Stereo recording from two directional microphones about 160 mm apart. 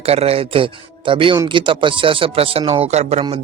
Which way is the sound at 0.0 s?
40° right (ahead or behind).